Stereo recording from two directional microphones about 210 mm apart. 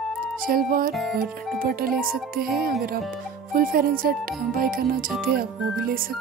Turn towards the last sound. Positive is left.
turn(degrees=-45)  # may be behind; listen again after turning